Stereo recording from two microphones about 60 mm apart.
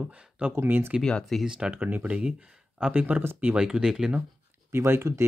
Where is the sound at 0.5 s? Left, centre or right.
Right.